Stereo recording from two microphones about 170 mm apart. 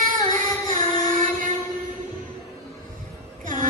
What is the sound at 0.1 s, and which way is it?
Music, 50° right (ahead or behind).